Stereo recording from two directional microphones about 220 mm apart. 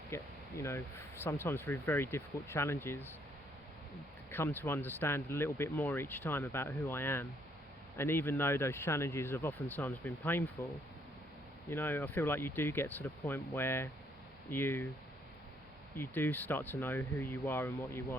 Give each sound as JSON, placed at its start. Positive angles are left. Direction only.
{"t": 0.1, "sound": "speech", "side_deg": 10}
{"t": 4.3, "sound": "speech", "side_deg": 10}
{"t": 11.7, "sound": "speech", "side_deg": 10}
{"t": 16.0, "sound": "speech", "side_deg": 10}